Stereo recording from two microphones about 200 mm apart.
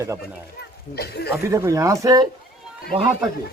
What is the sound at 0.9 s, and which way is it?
Speech, 55° left (ahead or behind).